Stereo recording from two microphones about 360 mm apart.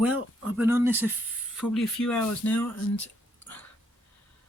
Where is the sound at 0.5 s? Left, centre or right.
Centre.